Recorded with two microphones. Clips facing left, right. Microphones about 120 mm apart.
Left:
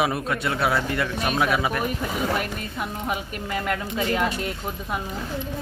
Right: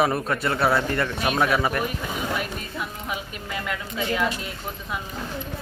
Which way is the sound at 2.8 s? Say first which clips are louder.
Left 4 dB; 45° left (ahead or behind).